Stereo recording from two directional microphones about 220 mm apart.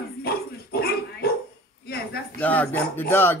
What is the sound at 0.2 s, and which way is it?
Dog, 45° left (ahead or behind).